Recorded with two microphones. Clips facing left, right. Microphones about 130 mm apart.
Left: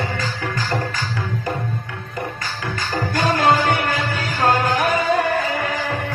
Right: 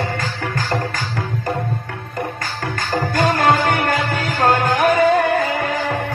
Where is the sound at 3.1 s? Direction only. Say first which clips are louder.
Right 1 dB; 50° right (ahead or behind).